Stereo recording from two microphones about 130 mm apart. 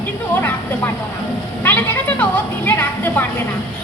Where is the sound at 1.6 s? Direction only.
15° left (ahead or behind).